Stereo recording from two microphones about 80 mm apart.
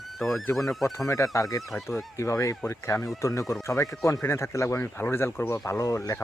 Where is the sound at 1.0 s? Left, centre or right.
Left.